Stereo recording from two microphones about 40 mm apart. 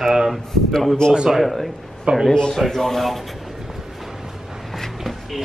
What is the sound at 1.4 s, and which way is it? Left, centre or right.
Speech, centre.